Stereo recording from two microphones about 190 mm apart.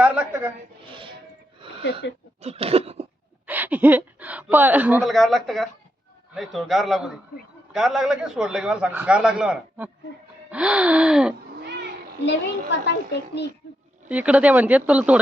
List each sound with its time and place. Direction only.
0.0 s a woman's voice: 5° right (ahead or behind)
1.8 s speech: 65° left (ahead or behind)
2.4 s a sound: 30° right (ahead or behind)
3.4 s gasp: 10° right (ahead or behind)
5.1 s a man's voice: centre (ahead or behind)
11.6 s cat: 60° right (ahead or behind)
12.2 s a child's voice: 65° left (ahead or behind)
14.1 s speech: 5° right (ahead or behind)